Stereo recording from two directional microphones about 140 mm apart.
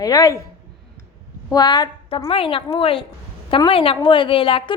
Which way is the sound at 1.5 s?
30° left (ahead or behind).